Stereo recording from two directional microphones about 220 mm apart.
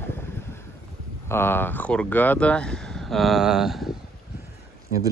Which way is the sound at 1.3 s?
10° left (ahead or behind).